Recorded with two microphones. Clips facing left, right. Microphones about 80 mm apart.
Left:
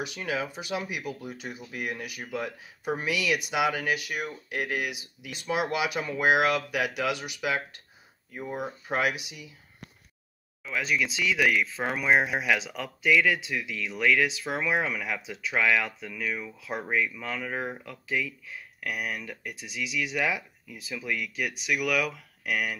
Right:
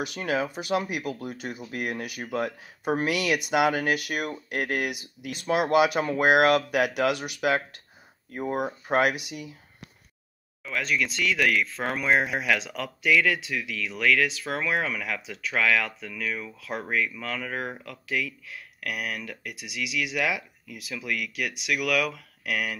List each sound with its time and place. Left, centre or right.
0.0 s speech: right
10.6 s speech: centre
21.0 s speech: centre
21.4 s speech: centre